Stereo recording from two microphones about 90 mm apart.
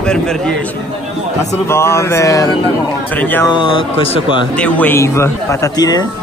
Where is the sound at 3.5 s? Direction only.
75° left (ahead or behind).